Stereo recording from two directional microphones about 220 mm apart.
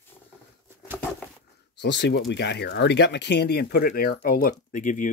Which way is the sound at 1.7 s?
50° left (ahead or behind).